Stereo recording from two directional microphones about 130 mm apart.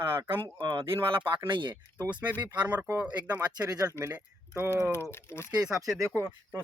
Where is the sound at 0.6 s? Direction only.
35° right (ahead or behind).